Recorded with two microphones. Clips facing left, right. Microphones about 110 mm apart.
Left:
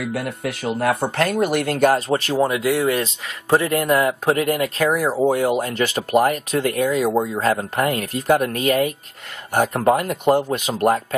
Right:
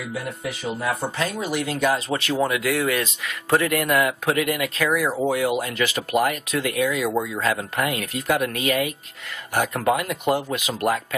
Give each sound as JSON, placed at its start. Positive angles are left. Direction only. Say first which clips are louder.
{"t": 0.0, "sound": "speech", "louder": "left 5 dB", "side_deg": 65}